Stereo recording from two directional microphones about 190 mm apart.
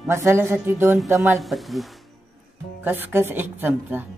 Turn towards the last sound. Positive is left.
turn(degrees=-10)  # may be behind; listen again after turning